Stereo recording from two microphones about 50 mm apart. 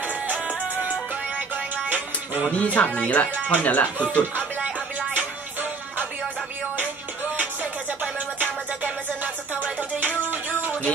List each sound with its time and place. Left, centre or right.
0.0 s music: right
2.5 s speech: left
5.1 s music: right
8.0 s music: right